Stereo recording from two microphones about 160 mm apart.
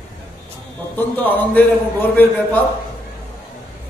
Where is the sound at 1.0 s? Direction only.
10° left (ahead or behind).